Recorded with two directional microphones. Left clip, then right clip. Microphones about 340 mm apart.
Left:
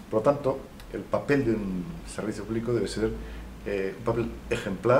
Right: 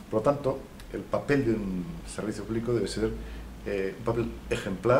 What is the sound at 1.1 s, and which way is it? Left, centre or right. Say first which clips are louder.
Speech: left 1 dB; centre.